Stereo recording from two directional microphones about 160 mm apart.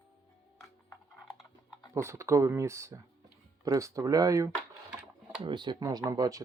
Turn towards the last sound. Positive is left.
turn(degrees=-20)  # may be behind; listen again after turning